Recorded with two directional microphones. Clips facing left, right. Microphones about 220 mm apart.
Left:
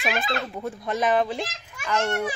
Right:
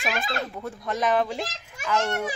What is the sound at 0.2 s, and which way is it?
Speech, 45° right (ahead or behind).